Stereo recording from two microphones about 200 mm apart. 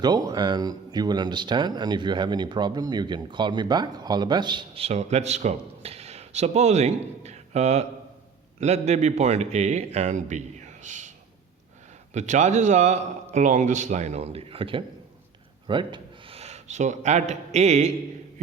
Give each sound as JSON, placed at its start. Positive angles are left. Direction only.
{"t": 0.0, "sound": "a man's voice", "side_deg": -20}
{"t": 12.1, "sound": "a man's voice", "side_deg": -35}